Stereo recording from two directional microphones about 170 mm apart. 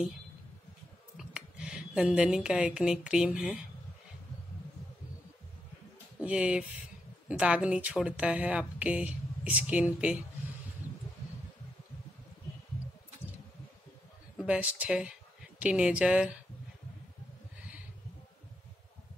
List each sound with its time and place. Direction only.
1.1 s speech: 5° right (ahead or behind)
6.2 s speech: 5° right (ahead or behind)
14.3 s speech: 5° right (ahead or behind)